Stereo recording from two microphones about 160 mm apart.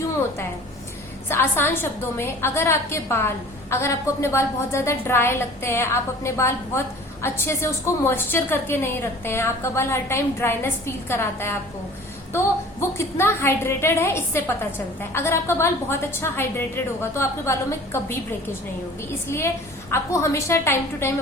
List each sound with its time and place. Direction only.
1.3 s a woman's voice: 15° left (ahead or behind)
13.0 s a woman's voice: 15° left (ahead or behind)
19.3 s a woman's voice: 15° left (ahead or behind)